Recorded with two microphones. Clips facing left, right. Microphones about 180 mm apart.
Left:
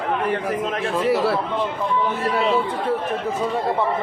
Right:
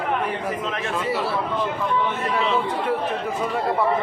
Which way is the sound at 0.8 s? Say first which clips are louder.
Left 6 dB; 35° left (ahead or behind).